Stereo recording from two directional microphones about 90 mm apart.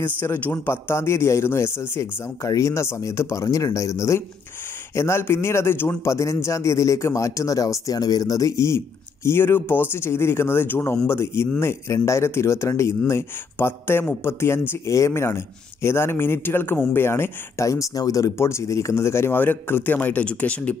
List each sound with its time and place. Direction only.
0.0 s a man's voice: 25° left (ahead or behind)